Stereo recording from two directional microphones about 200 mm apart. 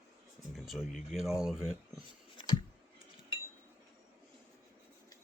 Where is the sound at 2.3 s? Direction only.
25° left (ahead or behind).